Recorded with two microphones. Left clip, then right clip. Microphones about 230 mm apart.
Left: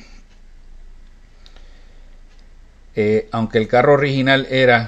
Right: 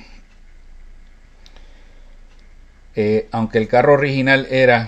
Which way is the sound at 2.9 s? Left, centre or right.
Centre.